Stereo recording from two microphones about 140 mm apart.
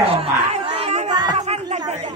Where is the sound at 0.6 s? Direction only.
40° right (ahead or behind).